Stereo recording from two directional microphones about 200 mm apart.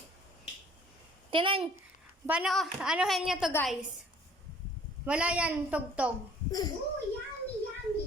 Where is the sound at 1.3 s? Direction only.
25° right (ahead or behind).